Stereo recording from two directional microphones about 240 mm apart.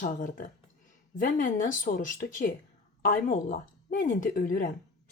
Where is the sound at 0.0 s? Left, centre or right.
Left.